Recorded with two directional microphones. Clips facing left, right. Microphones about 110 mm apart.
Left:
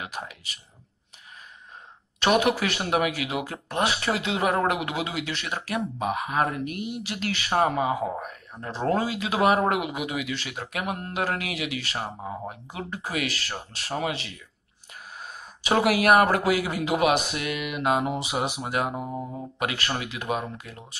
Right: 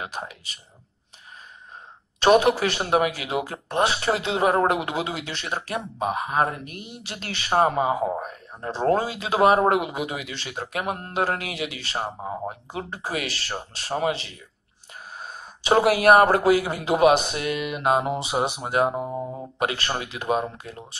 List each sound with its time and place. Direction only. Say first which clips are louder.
0.0 s speech: right 2 dB; 30° right (ahead or behind)
2.1 s speech: right 4 dB; 30° right (ahead or behind)